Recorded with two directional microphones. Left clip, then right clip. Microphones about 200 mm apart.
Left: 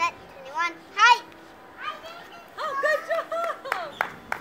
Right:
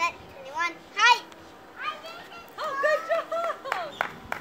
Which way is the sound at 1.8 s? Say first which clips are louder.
Right 1 dB; 55° left (ahead or behind).